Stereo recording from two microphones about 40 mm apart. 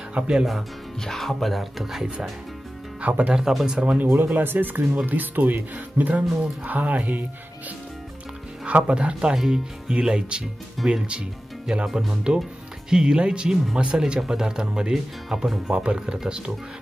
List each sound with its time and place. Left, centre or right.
0.2 s speech: right
1.0 s speech: centre
3.0 s speech: right
3.3 s speech: centre
4.0 s speech: right
8.8 s speech: right
10.8 s speech: centre
11.7 s speech: centre
15.7 s speech: right